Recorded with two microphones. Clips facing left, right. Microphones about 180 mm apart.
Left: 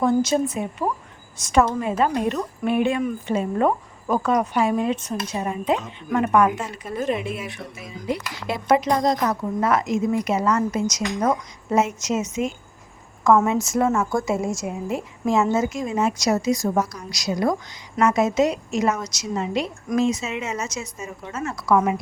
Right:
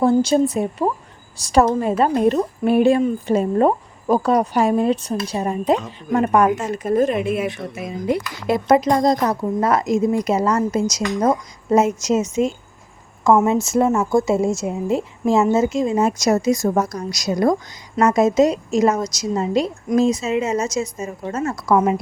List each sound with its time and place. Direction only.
0.0 s speech: 30° right (ahead or behind); by 7.4 s 55° right (ahead or behind)
7.4 s a woman's voice: 75° right (ahead or behind); by 16.0 s 30° right (ahead or behind)
16.0 s speech: 45° right (ahead or behind)